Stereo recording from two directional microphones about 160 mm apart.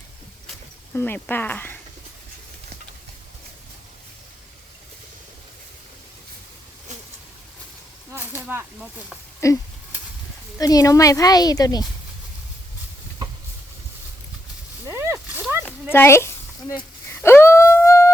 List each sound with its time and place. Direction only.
0.9 s speech: 10° left (ahead or behind)
8.1 s speech: 10° right (ahead or behind)
9.4 s speech: 20° left (ahead or behind)
10.6 s speech: 20° left (ahead or behind)
14.8 s a sound: 15° right (ahead or behind)
15.6 s a sound: 15° left (ahead or behind)